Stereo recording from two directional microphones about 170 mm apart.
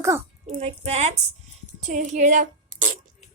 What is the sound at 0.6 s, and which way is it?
A woman's voice, 40° right (ahead or behind).